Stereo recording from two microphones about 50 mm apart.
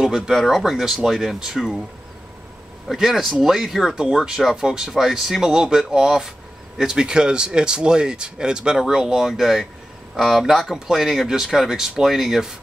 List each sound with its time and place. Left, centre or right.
0.0 s speech: centre
0.3 s speech: centre
2.9 s speech: centre